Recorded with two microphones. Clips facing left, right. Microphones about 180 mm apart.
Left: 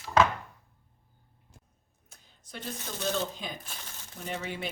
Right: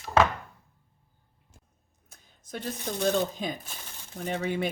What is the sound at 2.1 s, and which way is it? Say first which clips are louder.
Speech: right 7 dB; 45° right (ahead or behind).